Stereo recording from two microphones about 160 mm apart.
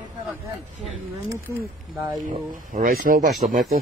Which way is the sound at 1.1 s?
20° right (ahead or behind).